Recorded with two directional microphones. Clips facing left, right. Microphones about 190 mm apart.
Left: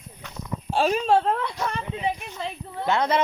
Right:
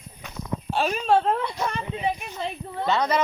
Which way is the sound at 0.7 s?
35° left (ahead or behind).